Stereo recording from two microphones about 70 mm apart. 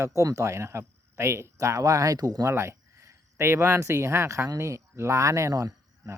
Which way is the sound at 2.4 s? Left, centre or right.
Right.